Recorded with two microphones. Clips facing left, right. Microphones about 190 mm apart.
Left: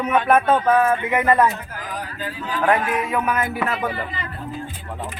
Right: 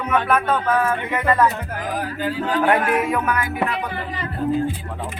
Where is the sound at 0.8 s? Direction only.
15° left (ahead or behind).